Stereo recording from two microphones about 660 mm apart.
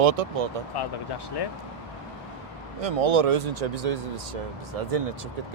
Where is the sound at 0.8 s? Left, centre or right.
Left.